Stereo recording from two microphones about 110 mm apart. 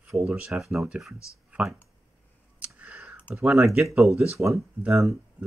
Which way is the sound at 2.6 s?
10° right (ahead or behind).